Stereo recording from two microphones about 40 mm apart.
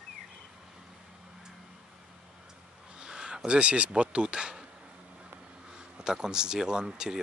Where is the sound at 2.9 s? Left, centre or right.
Right.